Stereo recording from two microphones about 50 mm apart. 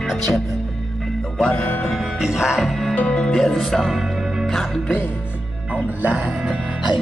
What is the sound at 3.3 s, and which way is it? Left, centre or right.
Speech, centre.